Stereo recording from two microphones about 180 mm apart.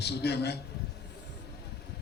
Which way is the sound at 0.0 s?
65° left (ahead or behind).